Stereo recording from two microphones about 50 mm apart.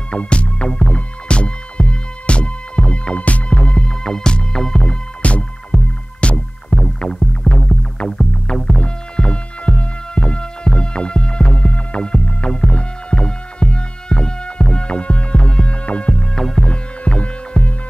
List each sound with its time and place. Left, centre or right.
0.1 s music: left
3.5 s music: centre
5.2 s music: left
5.7 s music: right
6.2 s music: left
8.7 s music: centre
16.3 s music: centre
16.6 s music: centre